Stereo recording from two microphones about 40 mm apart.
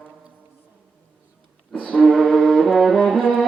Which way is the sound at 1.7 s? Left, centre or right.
Centre.